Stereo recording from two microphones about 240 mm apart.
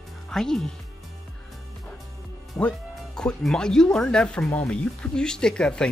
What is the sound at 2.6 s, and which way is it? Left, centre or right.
Speech, centre.